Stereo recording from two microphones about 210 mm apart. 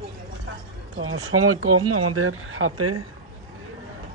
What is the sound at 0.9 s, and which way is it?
Speech, 85° right.